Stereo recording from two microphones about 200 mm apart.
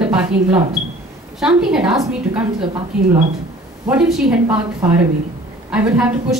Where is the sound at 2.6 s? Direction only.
25° right (ahead or behind).